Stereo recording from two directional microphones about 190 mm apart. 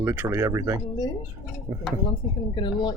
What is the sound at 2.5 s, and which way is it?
Speech, 25° left (ahead or behind).